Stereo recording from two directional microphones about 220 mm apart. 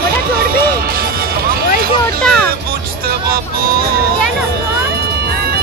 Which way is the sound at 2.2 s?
5° left (ahead or behind).